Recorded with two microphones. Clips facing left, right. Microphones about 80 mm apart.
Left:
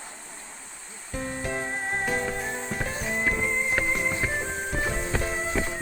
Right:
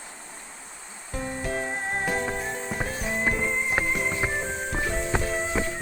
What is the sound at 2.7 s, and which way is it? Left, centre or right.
Music, centre.